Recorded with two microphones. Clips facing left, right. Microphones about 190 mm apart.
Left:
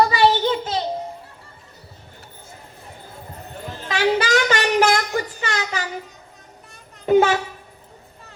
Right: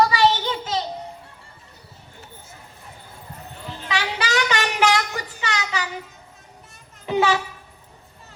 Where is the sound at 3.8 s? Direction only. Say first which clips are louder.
Left 7 dB; 40° left (ahead or behind).